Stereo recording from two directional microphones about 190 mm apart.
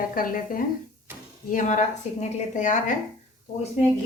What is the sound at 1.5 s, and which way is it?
A woman's voice, 40° left (ahead or behind).